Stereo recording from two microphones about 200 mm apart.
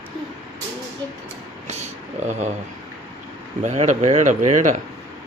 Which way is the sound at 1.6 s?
35° right (ahead or behind).